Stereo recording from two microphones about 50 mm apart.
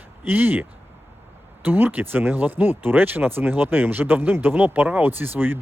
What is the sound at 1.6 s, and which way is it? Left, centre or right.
Speech, right.